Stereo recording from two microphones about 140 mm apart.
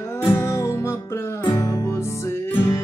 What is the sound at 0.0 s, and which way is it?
Music, 20° left (ahead or behind).